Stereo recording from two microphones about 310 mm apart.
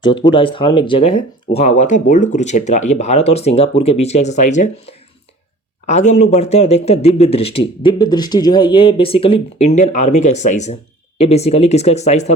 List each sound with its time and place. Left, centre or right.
0.0 s speech: centre